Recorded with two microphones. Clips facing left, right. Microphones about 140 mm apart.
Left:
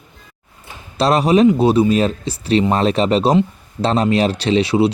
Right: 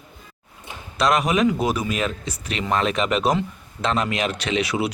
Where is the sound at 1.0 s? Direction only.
30° left (ahead or behind).